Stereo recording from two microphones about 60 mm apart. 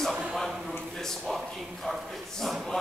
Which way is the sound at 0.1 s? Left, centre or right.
Centre.